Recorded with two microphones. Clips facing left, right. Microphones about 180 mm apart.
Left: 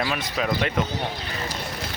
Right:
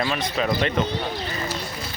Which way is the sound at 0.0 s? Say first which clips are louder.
Right 2 dB; centre (ahead or behind).